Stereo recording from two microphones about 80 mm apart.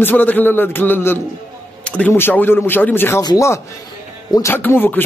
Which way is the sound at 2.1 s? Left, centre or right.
Left.